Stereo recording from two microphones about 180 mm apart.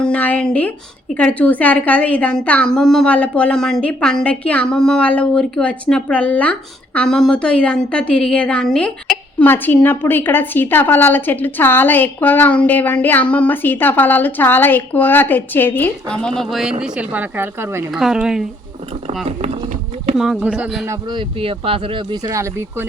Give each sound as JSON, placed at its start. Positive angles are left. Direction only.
{"t": 0.0, "sound": "a sound", "side_deg": 10}
{"t": 1.1, "sound": "a woman's voice", "side_deg": 5}
{"t": 17.9, "sound": "speech", "side_deg": 0}
{"t": 20.1, "sound": "speech", "side_deg": -5}
{"t": 20.8, "sound": "speech", "side_deg": -20}